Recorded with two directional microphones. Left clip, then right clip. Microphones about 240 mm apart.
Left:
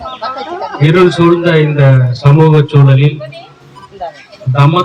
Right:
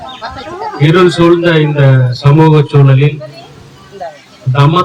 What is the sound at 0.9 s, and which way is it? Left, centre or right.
A man's voice, right.